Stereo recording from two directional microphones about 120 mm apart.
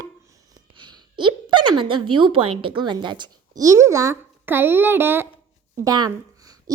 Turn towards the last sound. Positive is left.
turn(degrees=-35)  # may be behind; listen again after turning